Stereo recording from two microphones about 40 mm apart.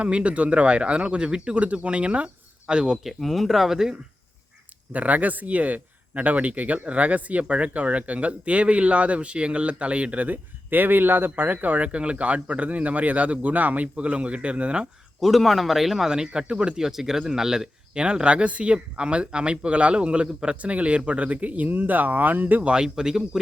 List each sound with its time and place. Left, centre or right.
0.0 s speech: right
1.5 s speech: right
3.0 s speech: centre
4.9 s speech: right
11.4 s speech: right
11.9 s speech: right
15.2 s speech: centre
16.0 s speech: centre
16.7 s speech: centre
17.9 s speech: right
22.7 s speech: centre